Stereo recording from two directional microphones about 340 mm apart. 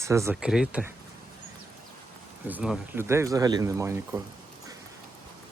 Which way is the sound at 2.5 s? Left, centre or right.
Centre.